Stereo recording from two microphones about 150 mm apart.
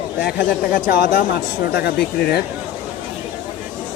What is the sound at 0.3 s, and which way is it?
Speech, 75° left (ahead or behind).